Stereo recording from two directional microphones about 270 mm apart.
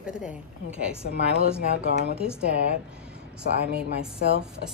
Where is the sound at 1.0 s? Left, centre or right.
Right.